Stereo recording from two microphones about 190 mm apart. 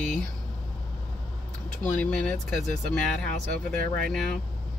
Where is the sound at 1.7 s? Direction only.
5° left (ahead or behind).